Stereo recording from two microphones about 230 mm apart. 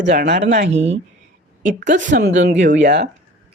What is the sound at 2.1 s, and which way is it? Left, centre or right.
Speech, right.